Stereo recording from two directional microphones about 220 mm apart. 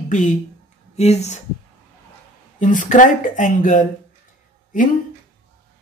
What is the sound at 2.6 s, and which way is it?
Speech, 35° left (ahead or behind).